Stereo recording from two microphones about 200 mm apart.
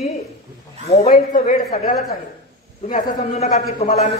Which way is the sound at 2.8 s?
35° left (ahead or behind).